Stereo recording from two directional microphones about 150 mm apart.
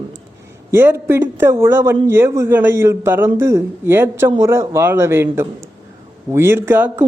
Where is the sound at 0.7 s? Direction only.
15° right (ahead or behind).